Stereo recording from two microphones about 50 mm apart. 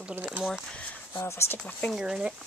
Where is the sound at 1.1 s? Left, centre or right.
Left.